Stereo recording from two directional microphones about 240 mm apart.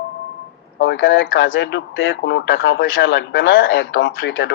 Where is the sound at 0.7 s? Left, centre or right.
Left.